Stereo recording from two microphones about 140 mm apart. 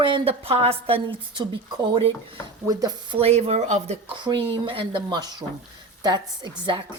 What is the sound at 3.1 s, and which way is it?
Speech, 50° right (ahead or behind).